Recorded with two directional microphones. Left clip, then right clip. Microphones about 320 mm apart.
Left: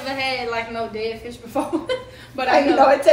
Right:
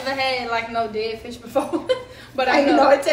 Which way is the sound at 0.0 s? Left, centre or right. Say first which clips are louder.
Right 1 dB; centre.